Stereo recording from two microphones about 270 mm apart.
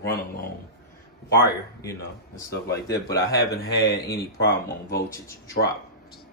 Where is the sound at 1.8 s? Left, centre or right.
Centre.